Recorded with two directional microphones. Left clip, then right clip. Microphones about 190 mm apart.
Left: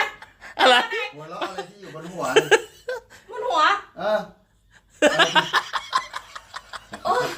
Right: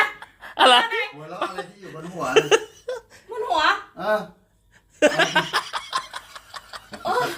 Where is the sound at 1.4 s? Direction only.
15° left (ahead or behind).